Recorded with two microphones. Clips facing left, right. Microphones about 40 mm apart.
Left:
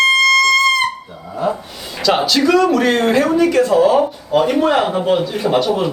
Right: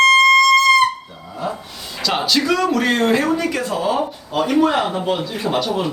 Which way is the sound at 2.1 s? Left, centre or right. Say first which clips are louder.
Left 5 dB; centre.